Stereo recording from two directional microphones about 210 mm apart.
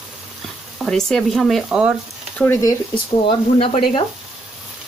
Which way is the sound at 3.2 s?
30° left (ahead or behind).